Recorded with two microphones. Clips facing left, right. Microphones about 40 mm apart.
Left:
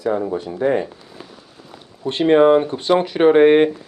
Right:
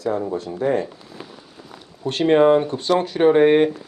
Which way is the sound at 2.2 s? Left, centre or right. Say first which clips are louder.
Left 2 dB; centre.